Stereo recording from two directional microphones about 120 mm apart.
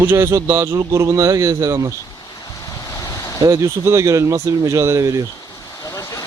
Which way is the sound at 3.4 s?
25° right (ahead or behind).